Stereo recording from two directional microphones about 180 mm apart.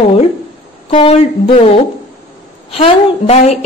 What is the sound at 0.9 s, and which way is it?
A woman's voice, 30° left (ahead or behind).